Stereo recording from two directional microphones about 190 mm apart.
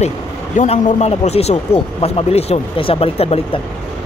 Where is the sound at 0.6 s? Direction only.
40° left (ahead or behind).